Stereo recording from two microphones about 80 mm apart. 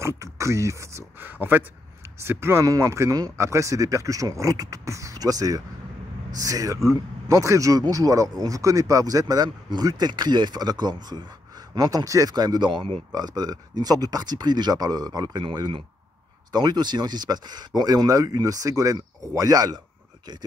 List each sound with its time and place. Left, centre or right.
0.0 s speech: right
1.2 s speech: right
2.6 s speech: right
13.1 s speech: right
16.5 s speech: right